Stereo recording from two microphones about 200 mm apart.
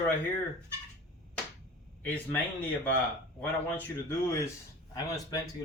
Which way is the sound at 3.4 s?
10° left (ahead or behind).